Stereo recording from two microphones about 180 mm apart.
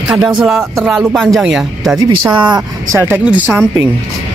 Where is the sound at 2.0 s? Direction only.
20° right (ahead or behind).